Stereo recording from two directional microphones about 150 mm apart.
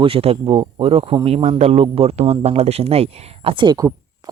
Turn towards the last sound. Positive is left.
turn(degrees=-25)  # may be behind; listen again after turning